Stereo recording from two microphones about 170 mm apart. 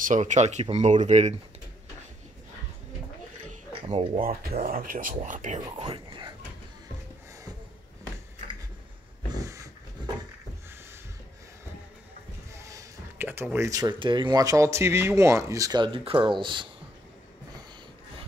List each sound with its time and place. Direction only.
0.0 s speech: 45° right (ahead or behind)
3.9 s speech: 35° right (ahead or behind)
4.2 s speech: 50° right (ahead or behind)
5.7 s speech: 30° right (ahead or behind)
9.3 s a sound: 20° right (ahead or behind)
12.5 s speech: 15° right (ahead or behind)